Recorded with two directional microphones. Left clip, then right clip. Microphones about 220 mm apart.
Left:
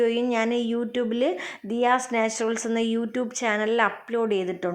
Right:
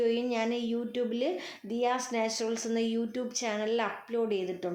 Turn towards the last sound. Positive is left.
turn(degrees=30)  # may be behind; listen again after turning